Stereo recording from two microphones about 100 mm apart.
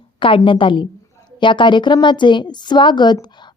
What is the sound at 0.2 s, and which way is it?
A woman's voice, 55° left (ahead or behind).